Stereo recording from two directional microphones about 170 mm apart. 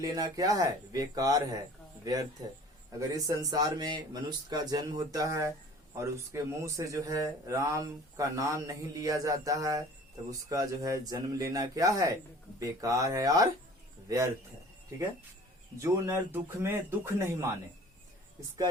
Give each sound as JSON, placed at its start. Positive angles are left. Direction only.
{"t": 0.0, "sound": "speech", "side_deg": -20}
{"t": 15.8, "sound": "speech", "side_deg": -15}